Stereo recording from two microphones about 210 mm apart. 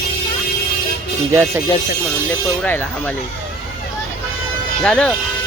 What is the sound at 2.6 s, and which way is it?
Speech, 10° left (ahead or behind).